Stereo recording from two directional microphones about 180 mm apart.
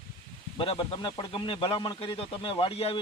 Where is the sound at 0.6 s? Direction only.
30° left (ahead or behind).